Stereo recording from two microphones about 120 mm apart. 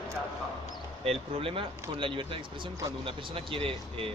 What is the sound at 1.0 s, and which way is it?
Speech, 50° right (ahead or behind).